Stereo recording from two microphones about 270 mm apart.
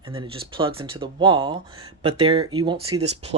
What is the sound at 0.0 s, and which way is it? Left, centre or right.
Speech, centre.